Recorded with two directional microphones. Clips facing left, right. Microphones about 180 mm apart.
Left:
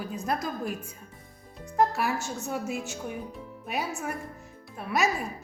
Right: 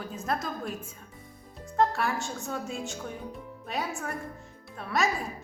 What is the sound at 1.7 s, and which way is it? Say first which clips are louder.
A woman's voice: left 1 dB; 5° left (ahead or behind).